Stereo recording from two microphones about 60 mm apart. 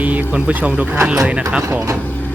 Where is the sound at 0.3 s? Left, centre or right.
Centre.